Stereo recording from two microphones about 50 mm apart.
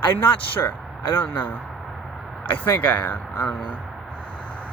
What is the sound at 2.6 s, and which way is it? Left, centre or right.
Speech, left.